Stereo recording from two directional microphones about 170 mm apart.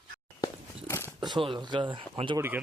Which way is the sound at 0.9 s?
15° left (ahead or behind).